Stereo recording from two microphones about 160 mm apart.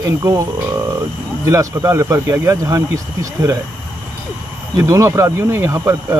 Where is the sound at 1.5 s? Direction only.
20° right (ahead or behind).